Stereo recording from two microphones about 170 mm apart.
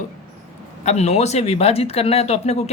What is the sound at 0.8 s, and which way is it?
Speech, 40° left (ahead or behind).